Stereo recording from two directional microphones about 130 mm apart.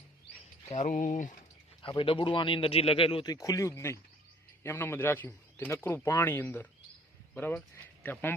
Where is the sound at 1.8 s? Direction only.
40° left (ahead or behind).